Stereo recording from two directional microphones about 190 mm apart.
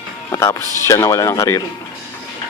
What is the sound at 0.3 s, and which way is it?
Speech, 15° left (ahead or behind).